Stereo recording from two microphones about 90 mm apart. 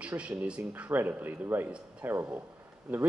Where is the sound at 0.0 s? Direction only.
15° right (ahead or behind).